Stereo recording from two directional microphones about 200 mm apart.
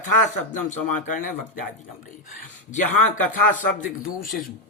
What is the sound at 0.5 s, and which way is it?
Speech, 40° left (ahead or behind).